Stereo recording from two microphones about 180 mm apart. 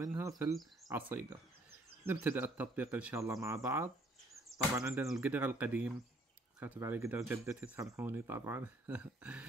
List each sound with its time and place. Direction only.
0.0 s speech: 20° right (ahead or behind)
5.0 s speech: 5° right (ahead or behind)